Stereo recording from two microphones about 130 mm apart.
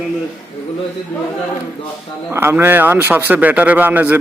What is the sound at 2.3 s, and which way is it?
A man's voice, 20° right (ahead or behind).